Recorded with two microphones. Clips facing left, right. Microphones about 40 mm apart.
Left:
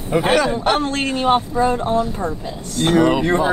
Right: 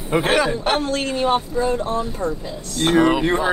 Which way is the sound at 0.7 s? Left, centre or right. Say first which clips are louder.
Left 1 dB; left.